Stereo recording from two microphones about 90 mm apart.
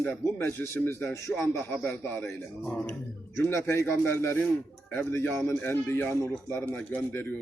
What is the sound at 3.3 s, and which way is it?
A man's voice, 30° left (ahead or behind).